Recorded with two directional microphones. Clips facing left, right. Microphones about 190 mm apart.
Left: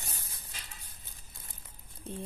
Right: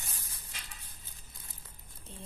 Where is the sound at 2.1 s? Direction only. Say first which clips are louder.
Left 11 dB; 55° left (ahead or behind).